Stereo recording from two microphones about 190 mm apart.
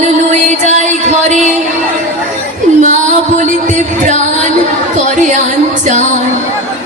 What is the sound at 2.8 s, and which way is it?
Music, 40° right (ahead or behind).